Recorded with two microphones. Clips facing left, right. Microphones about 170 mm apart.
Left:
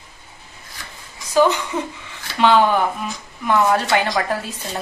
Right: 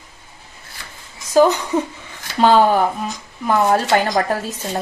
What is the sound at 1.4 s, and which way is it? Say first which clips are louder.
A woman's voice: right 3 dB; 40° right (ahead or behind).